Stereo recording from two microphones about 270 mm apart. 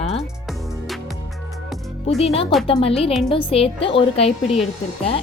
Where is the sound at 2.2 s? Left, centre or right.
Left.